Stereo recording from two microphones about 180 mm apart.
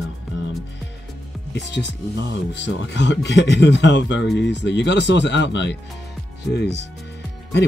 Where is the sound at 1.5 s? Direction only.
75° left (ahead or behind).